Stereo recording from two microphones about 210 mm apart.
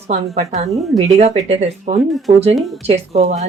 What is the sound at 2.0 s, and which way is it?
Speech, centre (ahead or behind).